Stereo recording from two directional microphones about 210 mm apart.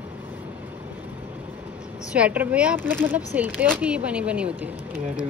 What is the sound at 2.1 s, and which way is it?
Speech, 5° right (ahead or behind).